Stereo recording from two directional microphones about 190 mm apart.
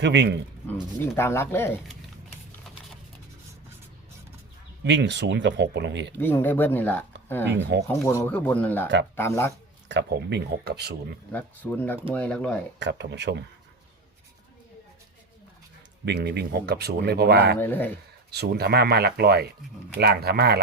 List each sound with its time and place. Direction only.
0.0 s speech: 65° right (ahead or behind)
0.7 s speech: 15° left (ahead or behind)
4.8 s speech: 65° right (ahead or behind)
6.1 s speech: 10° left (ahead or behind)
7.4 s speech: 65° right (ahead or behind)
7.9 s speech: 15° left (ahead or behind)
9.9 s speech: 65° right (ahead or behind)
11.3 s speech: 10° left (ahead or behind)
12.8 s speech: 65° right (ahead or behind)
16.0 s speech: 60° right (ahead or behind)
17.6 s speech: 10° left (ahead or behind)
18.3 s speech: 55° right (ahead or behind)